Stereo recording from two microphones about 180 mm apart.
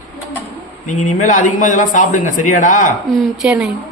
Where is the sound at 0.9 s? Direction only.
45° left (ahead or behind).